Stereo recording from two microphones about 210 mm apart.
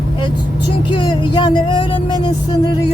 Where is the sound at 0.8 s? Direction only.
20° left (ahead or behind).